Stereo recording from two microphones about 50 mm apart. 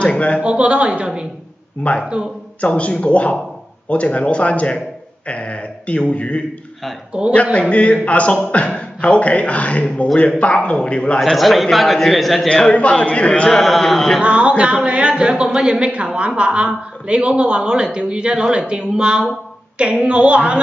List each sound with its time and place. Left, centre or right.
0.0 s a man's voice: left
0.4 s a woman's voice: right
1.8 s a man's voice: left
7.2 s a woman's voice: right
7.7 s a man's voice: left
11.1 s a man's voice: centre
12.4 s a man's voice: centre
13.3 s speech: centre
13.6 s a man's voice: centre
14.2 s a woman's voice: right